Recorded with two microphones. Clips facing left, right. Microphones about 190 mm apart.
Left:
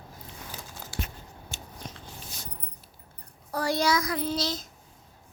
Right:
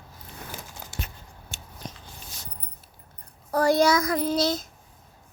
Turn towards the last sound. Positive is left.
turn(degrees=-50)  # may be behind; listen again after turning